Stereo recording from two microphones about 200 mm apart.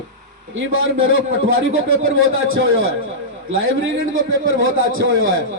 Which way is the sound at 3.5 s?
75° right (ahead or behind).